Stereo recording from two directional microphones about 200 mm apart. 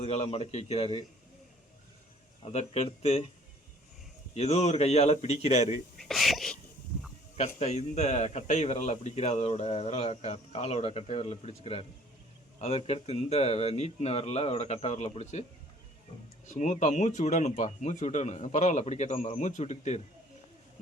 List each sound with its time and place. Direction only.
0.0 s a man's voice: 30° left (ahead or behind)
2.4 s a man's voice: 30° left (ahead or behind)
4.4 s a man's voice: 35° left (ahead or behind)
6.0 s a sound: centre (ahead or behind)
7.3 s a man's voice: 30° left (ahead or behind)
16.6 s a man's voice: 35° left (ahead or behind)